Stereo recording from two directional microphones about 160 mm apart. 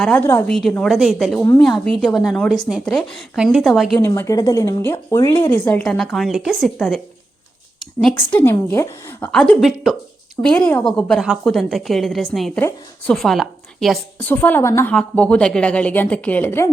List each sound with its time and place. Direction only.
0.0 s a woman's voice: 10° left (ahead or behind)
4.0 s a woman's voice: 15° left (ahead or behind); by 7.0 s centre (ahead or behind)
8.0 s a woman's voice: 10° left (ahead or behind)
14.3 s a woman's voice: 10° left (ahead or behind)